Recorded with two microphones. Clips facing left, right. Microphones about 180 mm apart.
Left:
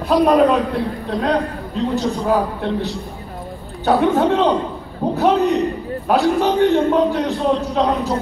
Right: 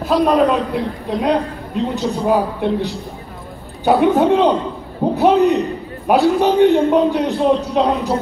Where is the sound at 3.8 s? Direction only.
20° right (ahead or behind).